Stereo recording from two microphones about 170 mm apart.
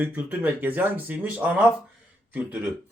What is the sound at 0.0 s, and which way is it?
Speech, 10° right (ahead or behind).